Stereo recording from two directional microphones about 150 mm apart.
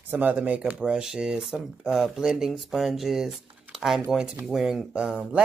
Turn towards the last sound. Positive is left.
turn(degrees=-5)  # may be behind; listen again after turning